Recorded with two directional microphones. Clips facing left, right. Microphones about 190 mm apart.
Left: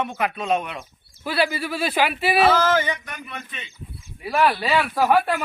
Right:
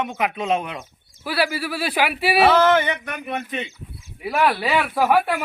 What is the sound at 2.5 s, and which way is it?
Speech, 65° right (ahead or behind).